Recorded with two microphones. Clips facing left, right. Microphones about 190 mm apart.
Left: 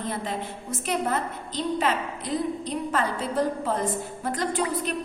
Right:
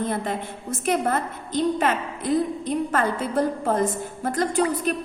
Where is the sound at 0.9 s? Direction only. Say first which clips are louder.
Right 4 dB; 50° right (ahead or behind).